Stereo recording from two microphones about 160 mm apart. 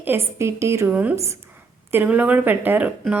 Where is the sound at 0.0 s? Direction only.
15° right (ahead or behind).